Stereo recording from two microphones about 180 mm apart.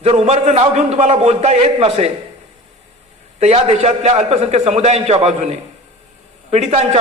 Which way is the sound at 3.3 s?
35° right (ahead or behind).